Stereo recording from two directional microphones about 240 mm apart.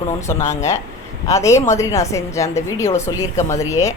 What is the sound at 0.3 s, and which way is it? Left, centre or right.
A woman's voice, centre.